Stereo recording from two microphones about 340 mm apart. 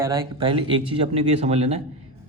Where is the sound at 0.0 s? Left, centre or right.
Centre.